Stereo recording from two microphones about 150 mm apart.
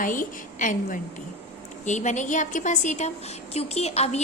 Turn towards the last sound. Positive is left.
turn(degrees=45)  # may be behind; listen again after turning